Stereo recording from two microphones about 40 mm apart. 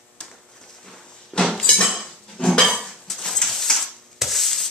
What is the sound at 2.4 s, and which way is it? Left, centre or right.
Dishes, centre.